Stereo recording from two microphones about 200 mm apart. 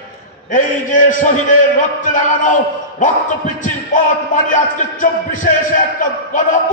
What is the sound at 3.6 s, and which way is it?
A man's voice, 40° left (ahead or behind).